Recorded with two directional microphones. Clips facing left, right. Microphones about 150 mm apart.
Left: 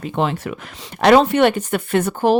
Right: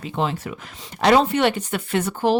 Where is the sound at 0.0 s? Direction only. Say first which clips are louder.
Left 4 dB; 60° left (ahead or behind).